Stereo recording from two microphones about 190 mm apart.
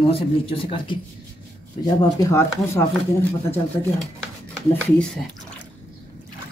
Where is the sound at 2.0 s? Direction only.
15° left (ahead or behind).